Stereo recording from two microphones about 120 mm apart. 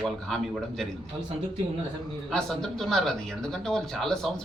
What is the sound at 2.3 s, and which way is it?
Speech, 5° left (ahead or behind).